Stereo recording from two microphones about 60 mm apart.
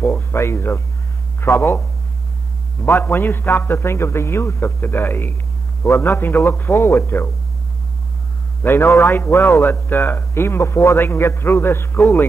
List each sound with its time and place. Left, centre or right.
0.3 s a man's voice: left
8.6 s a man's voice: left